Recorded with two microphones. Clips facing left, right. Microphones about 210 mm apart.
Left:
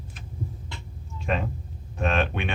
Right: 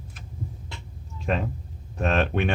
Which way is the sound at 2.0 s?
40° right (ahead or behind).